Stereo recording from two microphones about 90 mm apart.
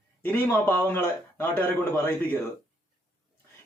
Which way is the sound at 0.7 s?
20° left (ahead or behind).